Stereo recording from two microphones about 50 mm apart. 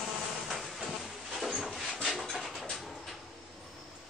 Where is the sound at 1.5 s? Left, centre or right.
Centre.